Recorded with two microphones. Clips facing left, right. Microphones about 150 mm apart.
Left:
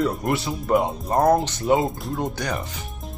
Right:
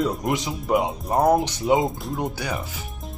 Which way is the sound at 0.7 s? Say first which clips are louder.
Left 1 dB; 5° right (ahead or behind).